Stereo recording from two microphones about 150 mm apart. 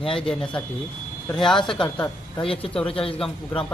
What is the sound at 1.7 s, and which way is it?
A woman's voice, 30° left (ahead or behind).